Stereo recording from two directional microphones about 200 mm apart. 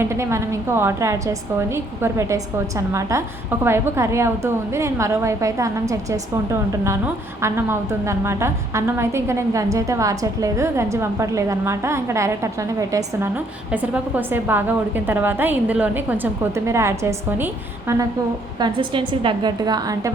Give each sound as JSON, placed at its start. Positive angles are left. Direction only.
{"t": 0.0, "sound": "a woman's voice", "side_deg": -15}
{"t": 18.6, "sound": "a woman's voice", "side_deg": -25}